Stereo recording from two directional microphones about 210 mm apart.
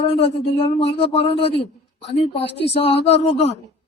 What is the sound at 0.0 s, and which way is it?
Speech, 30° left (ahead or behind).